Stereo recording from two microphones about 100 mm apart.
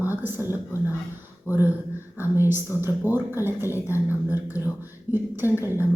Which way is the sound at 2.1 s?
20° right (ahead or behind).